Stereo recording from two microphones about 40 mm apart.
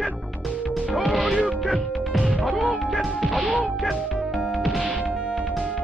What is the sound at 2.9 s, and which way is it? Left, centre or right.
Smash, centre.